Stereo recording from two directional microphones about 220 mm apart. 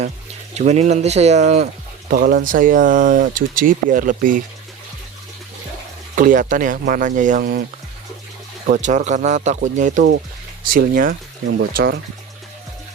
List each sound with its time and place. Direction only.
0.5 s speech: 30° right (ahead or behind)
6.1 s speech: 35° right (ahead or behind)
8.7 s speech: 35° right (ahead or behind)